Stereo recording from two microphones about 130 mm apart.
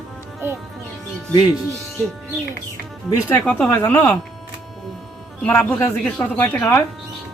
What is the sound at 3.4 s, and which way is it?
Speech, 10° left (ahead or behind).